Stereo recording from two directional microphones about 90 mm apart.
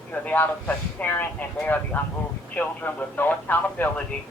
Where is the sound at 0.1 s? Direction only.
20° left (ahead or behind).